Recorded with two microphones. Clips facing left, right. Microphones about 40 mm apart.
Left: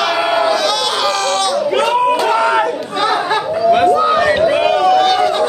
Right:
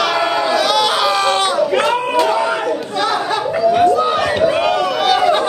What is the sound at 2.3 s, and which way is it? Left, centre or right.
Crowd, left.